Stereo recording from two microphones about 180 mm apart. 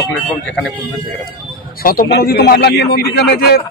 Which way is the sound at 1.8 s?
60° left (ahead or behind).